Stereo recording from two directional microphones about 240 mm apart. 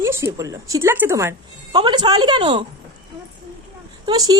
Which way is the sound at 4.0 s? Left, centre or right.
Centre.